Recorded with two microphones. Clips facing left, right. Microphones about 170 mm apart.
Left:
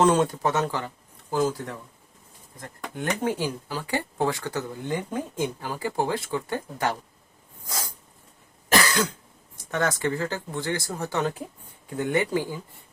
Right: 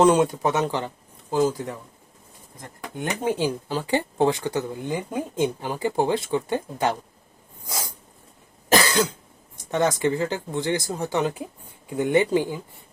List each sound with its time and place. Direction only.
0.0 s speech: 15° right (ahead or behind)
8.7 s cough: 25° right (ahead or behind)
9.6 s speech: 20° right (ahead or behind)